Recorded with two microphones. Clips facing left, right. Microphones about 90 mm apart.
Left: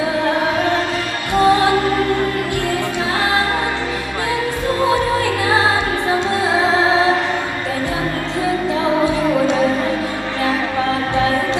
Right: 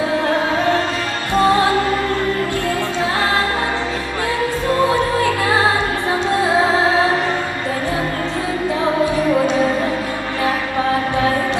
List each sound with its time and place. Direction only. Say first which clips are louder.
1.5 s music: left 2 dB; 20° left (ahead or behind)
6.8 s music: left 1 dB; 20° left (ahead or behind)
9.0 s music: even; 20° left (ahead or behind)